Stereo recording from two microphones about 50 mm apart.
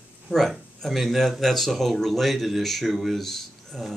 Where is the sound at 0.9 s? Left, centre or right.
Centre.